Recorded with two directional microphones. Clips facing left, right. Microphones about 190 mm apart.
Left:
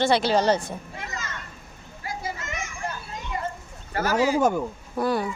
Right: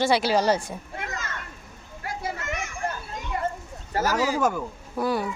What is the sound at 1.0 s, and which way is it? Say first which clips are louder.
Children playing: right 2 dB; 55° right (ahead or behind).